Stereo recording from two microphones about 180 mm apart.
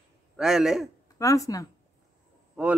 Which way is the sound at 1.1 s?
20° left (ahead or behind).